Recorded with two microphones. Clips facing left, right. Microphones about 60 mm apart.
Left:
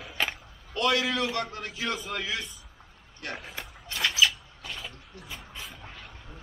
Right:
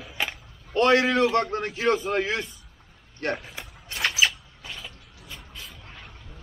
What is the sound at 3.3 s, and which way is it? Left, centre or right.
Speech, centre.